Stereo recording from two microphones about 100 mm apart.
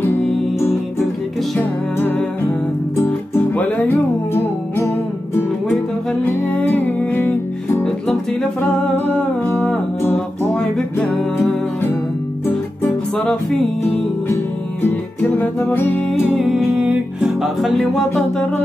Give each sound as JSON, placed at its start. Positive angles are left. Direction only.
{"t": 0.0, "sound": "music", "side_deg": 25}
{"t": 2.0, "sound": "music", "side_deg": 20}
{"t": 7.8, "sound": "music", "side_deg": 10}
{"t": 12.8, "sound": "music", "side_deg": 10}
{"t": 14.3, "sound": "music", "side_deg": 20}
{"t": 16.1, "sound": "music", "side_deg": -5}
{"t": 17.3, "sound": "music", "side_deg": 0}